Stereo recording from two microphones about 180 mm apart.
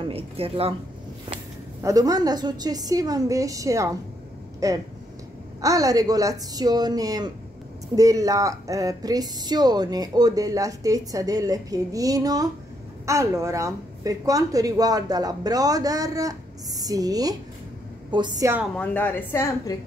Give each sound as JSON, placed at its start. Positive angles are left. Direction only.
{"t": 0.0, "sound": "speech", "side_deg": -30}
{"t": 1.8, "sound": "speech", "side_deg": -20}
{"t": 18.8, "sound": "a woman's voice", "side_deg": 10}